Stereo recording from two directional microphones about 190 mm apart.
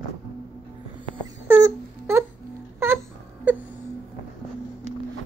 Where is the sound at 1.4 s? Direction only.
10° right (ahead or behind).